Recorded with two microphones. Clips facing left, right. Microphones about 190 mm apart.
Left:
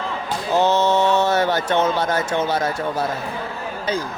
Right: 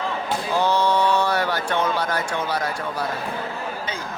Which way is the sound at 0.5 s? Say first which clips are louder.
Left 3 dB; 25° left (ahead or behind).